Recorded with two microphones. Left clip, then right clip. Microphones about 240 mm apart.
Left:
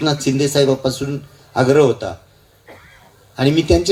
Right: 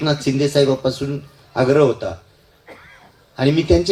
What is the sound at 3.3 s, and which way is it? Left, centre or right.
Speech, left.